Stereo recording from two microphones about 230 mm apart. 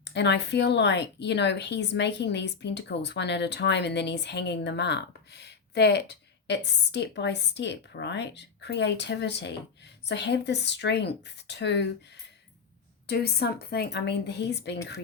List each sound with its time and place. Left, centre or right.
0.0 s speech: left
13.1 s speech: left